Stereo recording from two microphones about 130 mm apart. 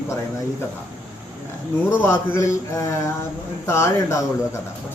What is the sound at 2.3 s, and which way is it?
Mantra, 20° left (ahead or behind).